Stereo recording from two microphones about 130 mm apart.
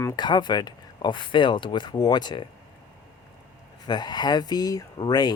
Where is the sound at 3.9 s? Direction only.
35° left (ahead or behind).